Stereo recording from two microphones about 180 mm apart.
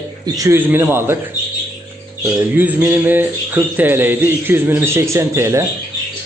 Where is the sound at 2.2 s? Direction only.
10° right (ahead or behind).